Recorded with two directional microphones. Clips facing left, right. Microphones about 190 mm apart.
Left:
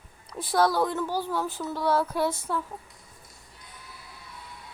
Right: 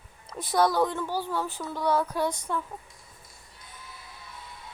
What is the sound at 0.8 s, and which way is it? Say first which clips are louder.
Speech: even; 10° left (ahead or behind).